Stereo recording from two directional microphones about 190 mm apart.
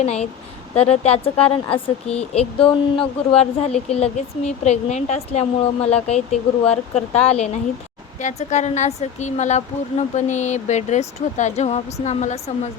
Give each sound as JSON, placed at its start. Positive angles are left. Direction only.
{"t": 0.0, "sound": "speech", "side_deg": 35}